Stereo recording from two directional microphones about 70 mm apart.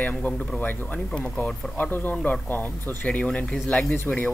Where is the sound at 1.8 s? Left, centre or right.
Left.